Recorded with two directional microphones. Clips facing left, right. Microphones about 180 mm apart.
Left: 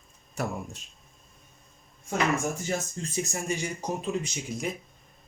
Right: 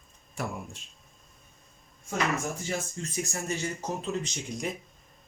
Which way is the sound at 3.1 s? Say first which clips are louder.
Left 2 dB; 20° left (ahead or behind).